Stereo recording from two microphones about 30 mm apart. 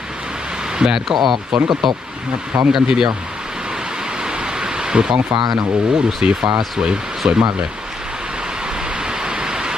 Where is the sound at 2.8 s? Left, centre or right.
Right.